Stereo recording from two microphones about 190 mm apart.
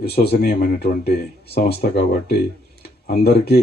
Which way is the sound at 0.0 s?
55° left (ahead or behind).